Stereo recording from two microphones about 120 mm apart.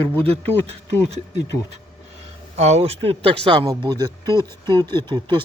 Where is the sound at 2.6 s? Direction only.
65° right (ahead or behind); by 3.7 s 45° right (ahead or behind).